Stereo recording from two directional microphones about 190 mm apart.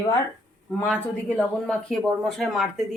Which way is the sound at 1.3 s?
5° left (ahead or behind).